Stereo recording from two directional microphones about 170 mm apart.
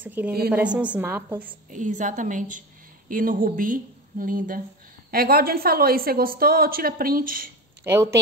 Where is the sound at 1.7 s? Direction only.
50° right (ahead or behind).